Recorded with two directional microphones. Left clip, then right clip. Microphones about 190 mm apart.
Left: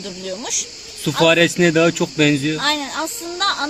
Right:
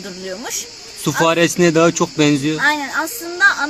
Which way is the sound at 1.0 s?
5° right (ahead or behind).